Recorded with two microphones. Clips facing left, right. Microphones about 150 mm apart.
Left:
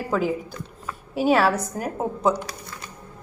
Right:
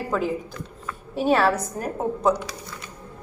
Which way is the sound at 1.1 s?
5° left (ahead or behind).